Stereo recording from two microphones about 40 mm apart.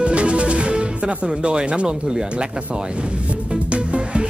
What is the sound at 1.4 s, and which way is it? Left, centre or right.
Speech, right.